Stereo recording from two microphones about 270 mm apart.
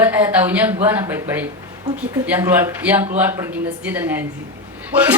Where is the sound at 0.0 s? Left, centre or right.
Centre.